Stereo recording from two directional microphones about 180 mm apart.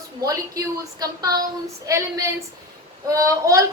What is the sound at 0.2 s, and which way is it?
A woman's voice, 20° right (ahead or behind).